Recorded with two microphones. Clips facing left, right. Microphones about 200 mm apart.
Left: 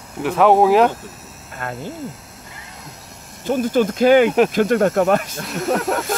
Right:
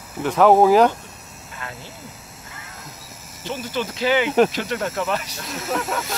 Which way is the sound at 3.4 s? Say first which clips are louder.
Left 10 dB; 50° left (ahead or behind).